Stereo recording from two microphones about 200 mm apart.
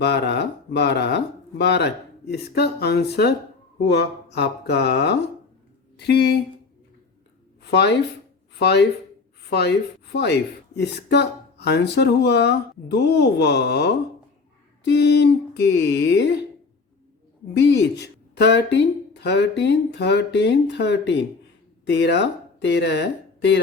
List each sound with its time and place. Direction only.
0.0 s speech: 60° left (ahead or behind)
7.6 s speech: 55° left (ahead or behind)
17.5 s speech: 60° left (ahead or behind)